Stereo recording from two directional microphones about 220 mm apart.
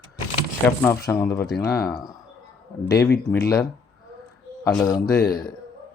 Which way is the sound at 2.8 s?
10° left (ahead or behind).